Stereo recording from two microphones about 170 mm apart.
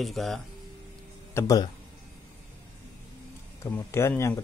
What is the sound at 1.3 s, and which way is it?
Speech, 20° left (ahead or behind).